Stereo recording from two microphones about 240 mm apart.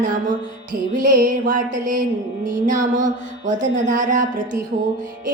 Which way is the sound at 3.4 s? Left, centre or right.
Right.